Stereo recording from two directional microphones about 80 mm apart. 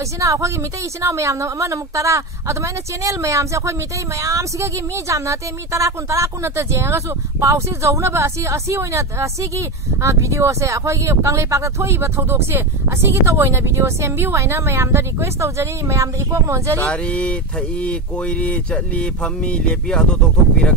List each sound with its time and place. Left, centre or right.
0.2 s a woman's voice: right
16.8 s speech: centre